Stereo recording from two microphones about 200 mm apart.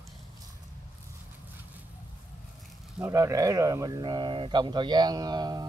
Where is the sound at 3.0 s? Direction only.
15° right (ahead or behind).